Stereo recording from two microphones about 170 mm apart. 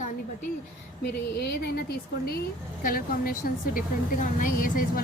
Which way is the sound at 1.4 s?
70° left (ahead or behind).